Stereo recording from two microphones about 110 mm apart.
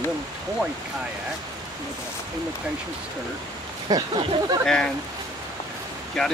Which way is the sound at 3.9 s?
40° right (ahead or behind).